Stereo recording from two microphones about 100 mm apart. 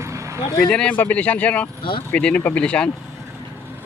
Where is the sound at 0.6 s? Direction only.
10° left (ahead or behind).